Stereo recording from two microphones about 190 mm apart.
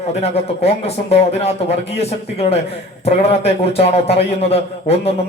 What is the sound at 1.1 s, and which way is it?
A man's voice, 35° left (ahead or behind).